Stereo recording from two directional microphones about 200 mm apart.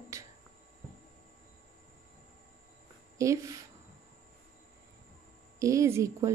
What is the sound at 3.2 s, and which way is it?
Speech, 15° right (ahead or behind).